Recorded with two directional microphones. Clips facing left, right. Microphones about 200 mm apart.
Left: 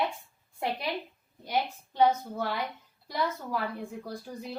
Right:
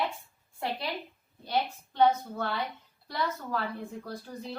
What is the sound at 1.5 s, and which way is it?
A woman's voice, 10° left (ahead or behind).